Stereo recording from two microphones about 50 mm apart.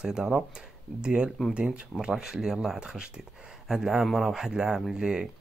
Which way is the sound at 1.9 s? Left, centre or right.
Centre.